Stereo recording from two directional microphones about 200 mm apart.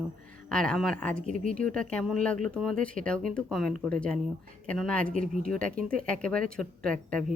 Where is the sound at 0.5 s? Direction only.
5° left (ahead or behind).